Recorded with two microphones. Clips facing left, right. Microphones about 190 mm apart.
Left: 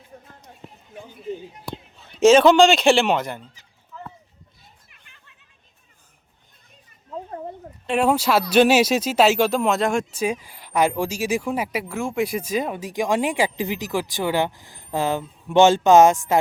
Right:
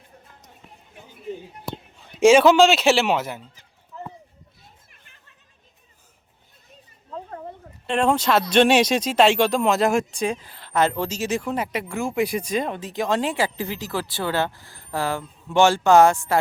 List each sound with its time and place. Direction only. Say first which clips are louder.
2.0 s a man's voice: left 1 dB; 10° right (ahead or behind)
7.9 s speech: left 1 dB; 5° left (ahead or behind)